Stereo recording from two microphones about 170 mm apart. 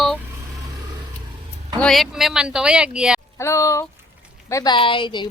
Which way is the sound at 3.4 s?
15° left (ahead or behind).